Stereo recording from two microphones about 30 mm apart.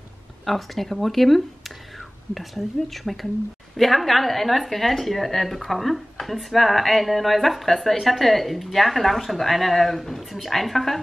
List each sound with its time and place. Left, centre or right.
0.5 s speech: centre